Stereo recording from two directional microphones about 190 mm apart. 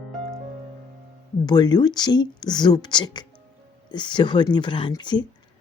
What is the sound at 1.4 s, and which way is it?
Speech, 20° left (ahead or behind).